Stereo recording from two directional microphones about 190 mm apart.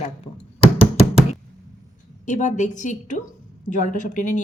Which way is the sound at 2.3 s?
40° left (ahead or behind).